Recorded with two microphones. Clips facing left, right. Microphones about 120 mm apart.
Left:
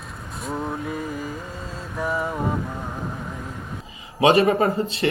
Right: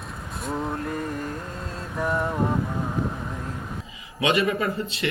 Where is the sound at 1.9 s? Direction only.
Centre (ahead or behind).